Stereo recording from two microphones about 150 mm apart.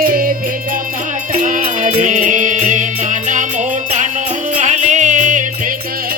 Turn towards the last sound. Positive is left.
turn(degrees=-55)  # may be behind; listen again after turning